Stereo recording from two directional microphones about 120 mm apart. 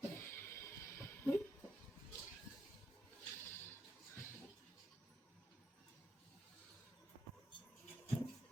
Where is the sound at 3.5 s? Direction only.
20° left (ahead or behind).